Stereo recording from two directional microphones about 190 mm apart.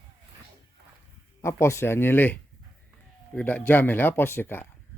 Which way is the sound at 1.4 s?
15° left (ahead or behind).